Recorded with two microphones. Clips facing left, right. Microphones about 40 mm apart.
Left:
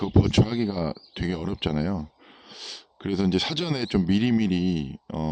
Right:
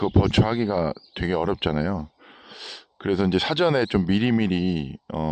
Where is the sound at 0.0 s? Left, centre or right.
Right.